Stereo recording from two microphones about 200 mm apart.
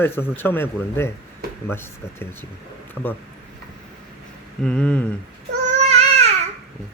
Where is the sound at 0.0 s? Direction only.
10° left (ahead or behind).